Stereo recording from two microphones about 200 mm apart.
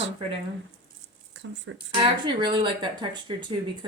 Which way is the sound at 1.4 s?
65° right (ahead or behind).